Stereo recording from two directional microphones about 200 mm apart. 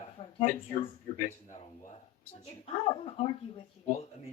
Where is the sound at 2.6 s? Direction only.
30° left (ahead or behind).